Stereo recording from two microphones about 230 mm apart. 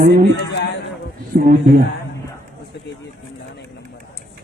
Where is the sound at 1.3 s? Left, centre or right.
Right.